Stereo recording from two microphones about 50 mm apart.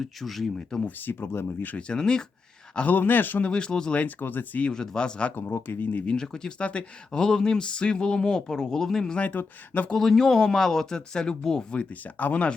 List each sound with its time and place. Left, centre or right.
0.0 s speech: centre
0.9 s speech: left
1.9 s speech: centre
2.9 s speech: left
3.4 s speech: centre
3.9 s speech: left
4.7 s speech: centre
5.3 s speech: left
5.9 s speech: left
6.1 s speech: centre
9.1 s speech: left
9.9 s speech: centre
11.7 s speech: left